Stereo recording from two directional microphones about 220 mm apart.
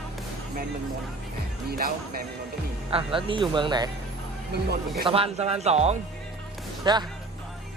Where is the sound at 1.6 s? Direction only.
45° right (ahead or behind).